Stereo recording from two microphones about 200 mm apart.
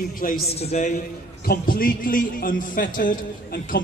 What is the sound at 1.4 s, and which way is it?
A man's voice, 45° left (ahead or behind).